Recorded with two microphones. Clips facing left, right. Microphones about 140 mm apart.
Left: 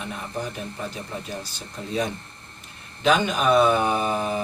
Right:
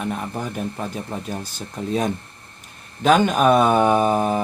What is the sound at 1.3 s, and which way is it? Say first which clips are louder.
Mantra: right 4 dB; 50° right (ahead or behind).